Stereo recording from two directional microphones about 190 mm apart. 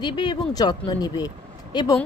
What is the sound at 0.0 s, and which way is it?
Speech, 25° left (ahead or behind).